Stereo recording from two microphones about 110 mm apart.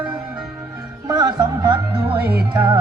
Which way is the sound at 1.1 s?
30° right (ahead or behind).